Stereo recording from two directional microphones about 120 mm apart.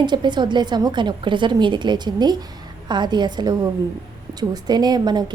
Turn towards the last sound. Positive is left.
turn(degrees=-35)  # may be behind; listen again after turning